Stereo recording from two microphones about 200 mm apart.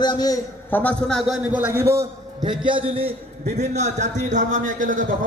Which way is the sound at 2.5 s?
25° right (ahead or behind).